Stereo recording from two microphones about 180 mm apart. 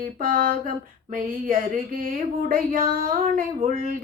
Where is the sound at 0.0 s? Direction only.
50° right (ahead or behind).